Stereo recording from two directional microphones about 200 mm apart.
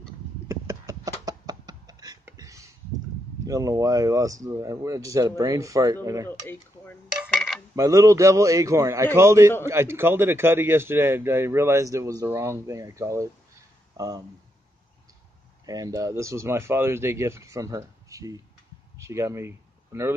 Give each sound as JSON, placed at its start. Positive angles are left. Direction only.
{"t": 0.5, "sound": "a sound", "side_deg": -15}
{"t": 3.4, "sound": "a man's voice", "side_deg": -15}
{"t": 6.4, "sound": "dishes", "side_deg": 10}
{"t": 7.7, "sound": "a man's voice", "side_deg": -15}
{"t": 15.6, "sound": "a man's voice", "side_deg": -20}